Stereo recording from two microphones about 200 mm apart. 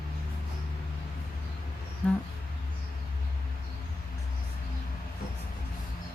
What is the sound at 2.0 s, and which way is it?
Speech, 5° left (ahead or behind).